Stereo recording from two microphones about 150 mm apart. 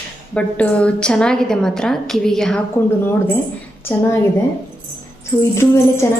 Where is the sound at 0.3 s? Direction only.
10° left (ahead or behind).